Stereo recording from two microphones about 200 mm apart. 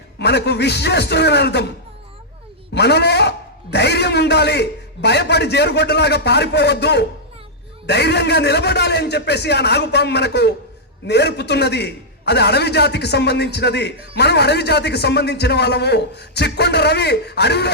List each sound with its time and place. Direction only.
0.2 s a man's voice: 55° left (ahead or behind)
2.7 s a man's voice: 55° left (ahead or behind)